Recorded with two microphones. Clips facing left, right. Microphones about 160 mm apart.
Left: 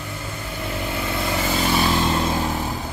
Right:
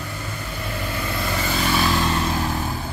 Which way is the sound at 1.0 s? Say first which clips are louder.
Left 2 dB; 20° left (ahead or behind).